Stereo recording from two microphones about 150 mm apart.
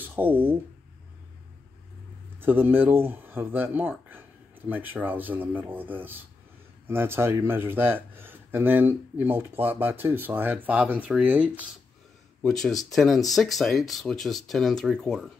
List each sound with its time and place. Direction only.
0.0 s speech: 10° right (ahead or behind)
2.4 s speech: 15° right (ahead or behind)
12.4 s speech: centre (ahead or behind)